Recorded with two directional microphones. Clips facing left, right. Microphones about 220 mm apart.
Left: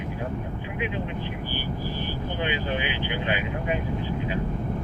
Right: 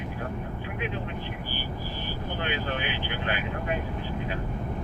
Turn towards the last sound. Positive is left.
turn(degrees=15)  # may be behind; listen again after turning